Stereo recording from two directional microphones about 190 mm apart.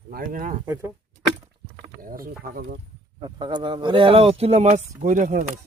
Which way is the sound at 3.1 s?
25° right (ahead or behind).